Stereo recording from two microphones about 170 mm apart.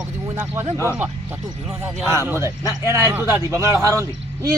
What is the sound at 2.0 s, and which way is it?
A man's voice, 15° right (ahead or behind).